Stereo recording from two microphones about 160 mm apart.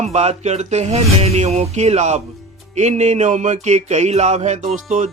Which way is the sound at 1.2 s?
40° right (ahead or behind).